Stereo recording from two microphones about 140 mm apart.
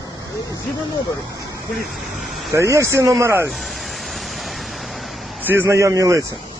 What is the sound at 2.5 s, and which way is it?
Speech, 20° right (ahead or behind).